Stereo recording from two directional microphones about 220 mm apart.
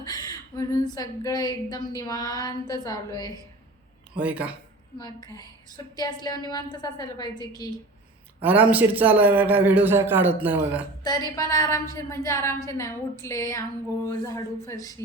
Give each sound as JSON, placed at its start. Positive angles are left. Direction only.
{"t": 0.0, "sound": "a sound", "side_deg": 20}
{"t": 0.9, "sound": "a woman's voice", "side_deg": 15}
{"t": 4.2, "sound": "a man's voice", "side_deg": -5}
{"t": 4.9, "sound": "a woman's voice", "side_deg": 15}
{"t": 8.4, "sound": "a man's voice", "side_deg": -5}
{"t": 11.0, "sound": "a woman's voice", "side_deg": 20}